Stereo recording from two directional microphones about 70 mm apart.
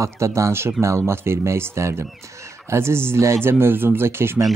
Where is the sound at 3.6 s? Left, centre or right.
Right.